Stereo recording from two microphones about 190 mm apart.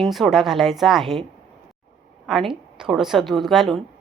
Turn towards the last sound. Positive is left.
turn(degrees=0)  # may be behind; listen again after turning